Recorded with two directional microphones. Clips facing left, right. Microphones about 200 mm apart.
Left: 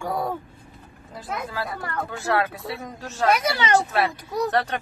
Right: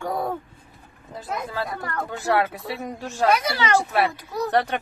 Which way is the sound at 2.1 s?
15° right (ahead or behind).